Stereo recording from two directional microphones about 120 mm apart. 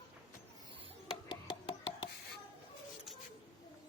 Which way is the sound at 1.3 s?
40° left (ahead or behind).